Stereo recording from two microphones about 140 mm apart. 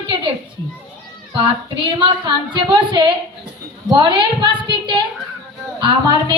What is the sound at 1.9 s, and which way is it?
A woman's voice, 35° right (ahead or behind).